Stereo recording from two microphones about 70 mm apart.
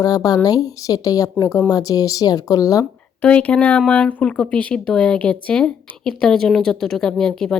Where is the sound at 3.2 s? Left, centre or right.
Centre.